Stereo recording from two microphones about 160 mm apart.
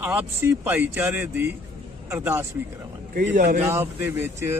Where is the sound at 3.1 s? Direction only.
55° right (ahead or behind).